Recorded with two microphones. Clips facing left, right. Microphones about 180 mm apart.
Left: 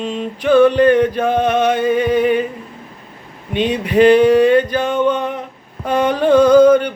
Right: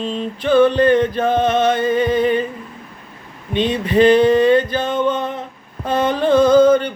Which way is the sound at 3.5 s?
10° left (ahead or behind).